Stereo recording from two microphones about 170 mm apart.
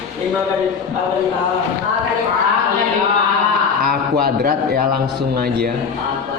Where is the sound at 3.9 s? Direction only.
60° right (ahead or behind).